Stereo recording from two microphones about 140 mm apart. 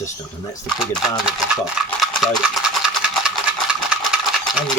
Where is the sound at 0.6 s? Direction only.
Centre (ahead or behind).